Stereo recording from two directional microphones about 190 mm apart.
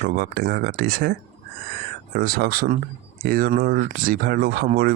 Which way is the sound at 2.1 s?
55° right (ahead or behind).